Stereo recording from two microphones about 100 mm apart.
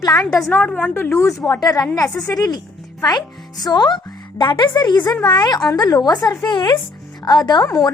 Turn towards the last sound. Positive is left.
turn(degrees=45)  # may be behind; listen again after turning